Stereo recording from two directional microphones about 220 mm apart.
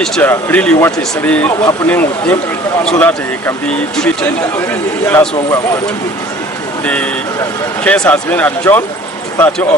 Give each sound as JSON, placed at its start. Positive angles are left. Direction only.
{"t": 0.0, "sound": "speech", "side_deg": 10}
{"t": 6.8, "sound": "speech", "side_deg": 5}